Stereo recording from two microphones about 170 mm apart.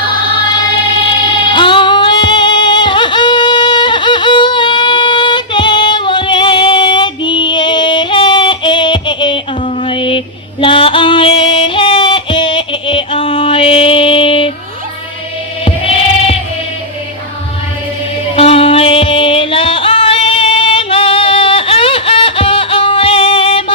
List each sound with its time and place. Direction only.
1.2 s music: 30° left (ahead or behind)
15.6 s music: 35° left (ahead or behind)
18.3 s music: 35° left (ahead or behind)